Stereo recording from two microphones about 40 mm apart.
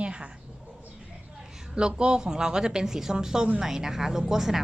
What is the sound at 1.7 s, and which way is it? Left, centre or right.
A woman's voice, right.